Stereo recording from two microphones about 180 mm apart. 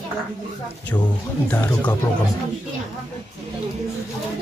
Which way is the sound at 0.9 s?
15° left (ahead or behind).